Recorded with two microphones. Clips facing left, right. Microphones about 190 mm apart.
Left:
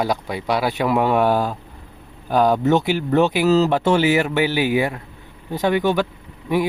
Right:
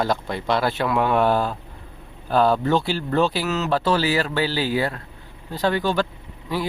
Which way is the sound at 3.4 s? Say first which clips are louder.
Left 9 dB; 35° left (ahead or behind).